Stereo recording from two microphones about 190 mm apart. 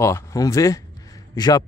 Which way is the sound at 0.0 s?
15° left (ahead or behind).